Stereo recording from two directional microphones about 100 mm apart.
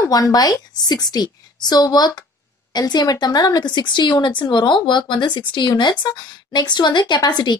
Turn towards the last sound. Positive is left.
turn(degrees=45)  # may be behind; listen again after turning